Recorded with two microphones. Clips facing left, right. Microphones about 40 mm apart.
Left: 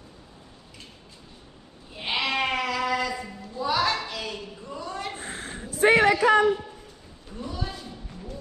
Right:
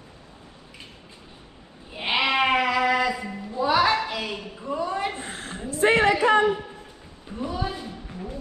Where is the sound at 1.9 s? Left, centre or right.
Right.